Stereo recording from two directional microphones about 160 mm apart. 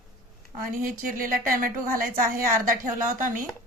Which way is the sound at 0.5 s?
60° right (ahead or behind).